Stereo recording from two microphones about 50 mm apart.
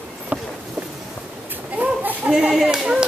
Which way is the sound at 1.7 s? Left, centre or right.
Right.